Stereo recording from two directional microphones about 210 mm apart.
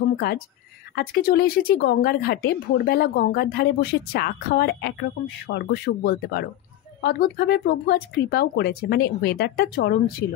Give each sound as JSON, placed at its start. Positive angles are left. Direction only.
{"t": 0.9, "sound": "speech", "side_deg": 45}